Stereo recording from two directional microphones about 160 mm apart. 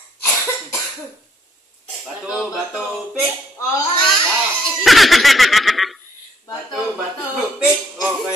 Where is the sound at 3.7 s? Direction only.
30° left (ahead or behind).